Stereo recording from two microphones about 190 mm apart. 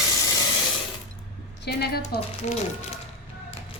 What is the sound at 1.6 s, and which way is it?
Speech, 55° left (ahead or behind).